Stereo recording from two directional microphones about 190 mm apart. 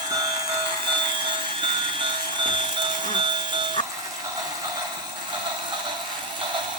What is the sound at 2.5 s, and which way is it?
Vehicle, 25° right (ahead or behind).